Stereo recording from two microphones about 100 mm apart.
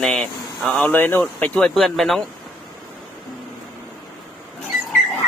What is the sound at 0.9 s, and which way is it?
Speech, 20° left (ahead or behind).